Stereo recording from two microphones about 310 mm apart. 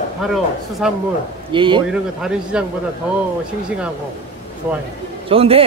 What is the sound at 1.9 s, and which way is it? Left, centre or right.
Speech, centre.